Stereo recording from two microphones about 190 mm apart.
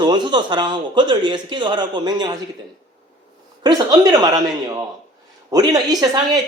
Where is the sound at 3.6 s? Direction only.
20° right (ahead or behind).